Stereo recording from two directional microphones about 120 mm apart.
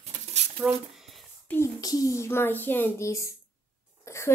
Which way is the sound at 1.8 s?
30° left (ahead or behind).